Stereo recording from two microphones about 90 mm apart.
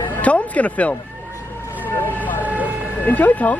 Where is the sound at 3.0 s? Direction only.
20° left (ahead or behind).